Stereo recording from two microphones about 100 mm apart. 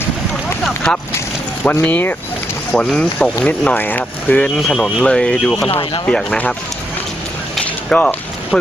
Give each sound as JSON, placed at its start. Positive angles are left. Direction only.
{"t": 1.8, "sound": "speech", "side_deg": 15}
{"t": 4.4, "sound": "speech", "side_deg": 5}
{"t": 7.6, "sound": "a sound", "side_deg": 10}